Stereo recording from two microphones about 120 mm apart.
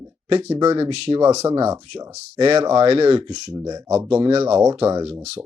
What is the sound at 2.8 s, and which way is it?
Speech, 50° right (ahead or behind).